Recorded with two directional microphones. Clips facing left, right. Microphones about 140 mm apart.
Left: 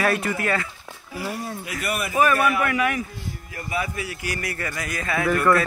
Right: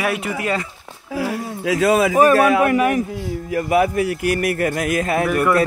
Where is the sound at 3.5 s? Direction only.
65° right (ahead or behind); by 5.3 s 40° right (ahead or behind).